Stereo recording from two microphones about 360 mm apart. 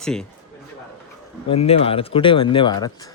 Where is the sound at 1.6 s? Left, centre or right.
Centre.